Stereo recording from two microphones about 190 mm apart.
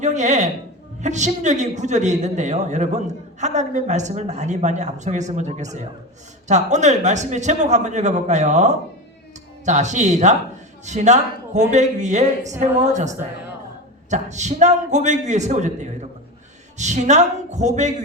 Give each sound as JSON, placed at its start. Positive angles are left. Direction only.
{"t": 0.0, "sound": "speech", "side_deg": -40}